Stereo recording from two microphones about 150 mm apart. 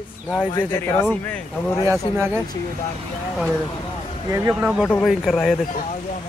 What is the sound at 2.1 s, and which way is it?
Speech, 15° right (ahead or behind).